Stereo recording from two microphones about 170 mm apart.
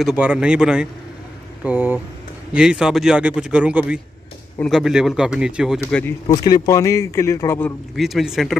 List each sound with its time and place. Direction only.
0.0 s speech: 5° right (ahead or behind)
5.8 s speech: 10° left (ahead or behind)
6.2 s a man's voice: 25° left (ahead or behind)
7.9 s speech: centre (ahead or behind)